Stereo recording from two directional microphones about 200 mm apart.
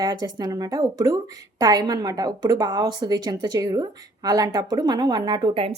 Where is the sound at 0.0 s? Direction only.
20° right (ahead or behind).